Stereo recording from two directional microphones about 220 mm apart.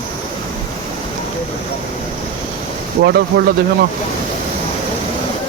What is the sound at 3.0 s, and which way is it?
Speech, 50° right (ahead or behind).